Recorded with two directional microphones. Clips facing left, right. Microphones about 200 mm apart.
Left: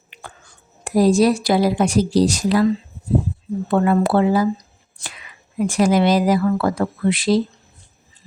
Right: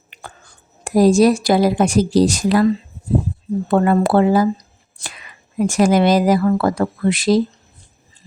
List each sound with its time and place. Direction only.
0.1 s speech: 40° right (ahead or behind)
3.7 s speech: 45° right (ahead or behind)
5.5 s speech: 45° right (ahead or behind)